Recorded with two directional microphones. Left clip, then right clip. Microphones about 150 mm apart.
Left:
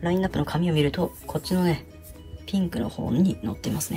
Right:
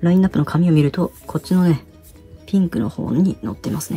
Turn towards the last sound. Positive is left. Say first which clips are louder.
# right 4 dB
turn(degrees=-15)  # may be behind; listen again after turning